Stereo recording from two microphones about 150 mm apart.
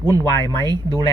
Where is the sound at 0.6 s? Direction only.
25° right (ahead or behind).